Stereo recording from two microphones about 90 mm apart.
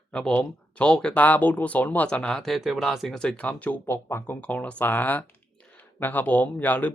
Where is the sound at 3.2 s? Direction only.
10° left (ahead or behind).